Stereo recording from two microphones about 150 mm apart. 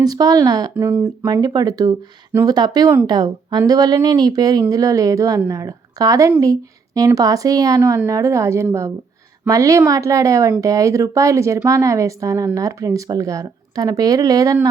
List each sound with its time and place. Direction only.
0.0 s speech: 25° right (ahead or behind)